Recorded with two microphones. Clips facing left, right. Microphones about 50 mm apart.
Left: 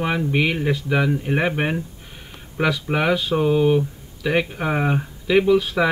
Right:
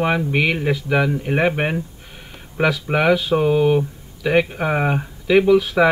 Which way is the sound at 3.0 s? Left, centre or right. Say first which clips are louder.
Right 3 dB; centre.